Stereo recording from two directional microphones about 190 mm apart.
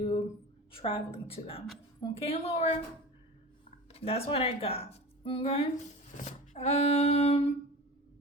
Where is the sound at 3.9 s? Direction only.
30° left (ahead or behind).